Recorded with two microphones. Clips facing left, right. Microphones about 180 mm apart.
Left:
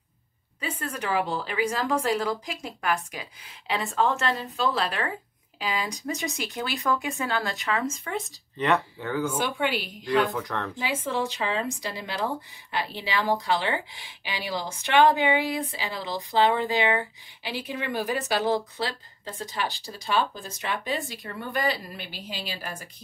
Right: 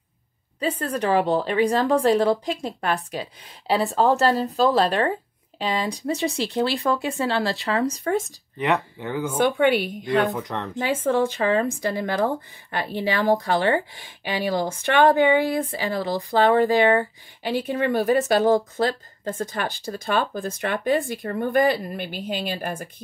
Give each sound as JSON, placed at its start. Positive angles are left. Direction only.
{"t": 0.6, "sound": "speech", "side_deg": -35}
{"t": 8.5, "sound": "speech", "side_deg": -15}
{"t": 9.4, "sound": "a woman's voice", "side_deg": -55}
{"t": 10.2, "sound": "speech", "side_deg": -20}
{"t": 10.8, "sound": "speech", "side_deg": -50}